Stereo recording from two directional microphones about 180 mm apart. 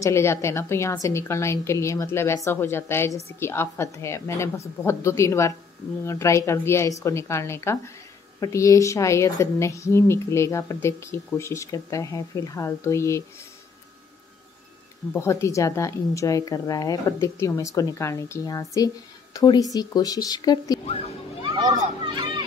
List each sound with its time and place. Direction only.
0.0 s a woman's voice: 15° left (ahead or behind)
15.1 s a woman's voice: 15° left (ahead or behind)
21.7 s a child's voice: 25° right (ahead or behind)